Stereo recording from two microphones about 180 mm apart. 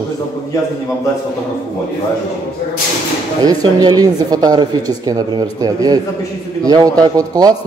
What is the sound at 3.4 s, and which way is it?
Speech, 20° right (ahead or behind).